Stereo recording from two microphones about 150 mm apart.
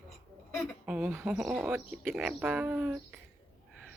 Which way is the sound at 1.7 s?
15° right (ahead or behind).